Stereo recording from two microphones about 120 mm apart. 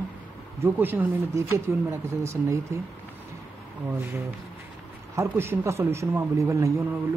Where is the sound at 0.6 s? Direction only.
15° right (ahead or behind).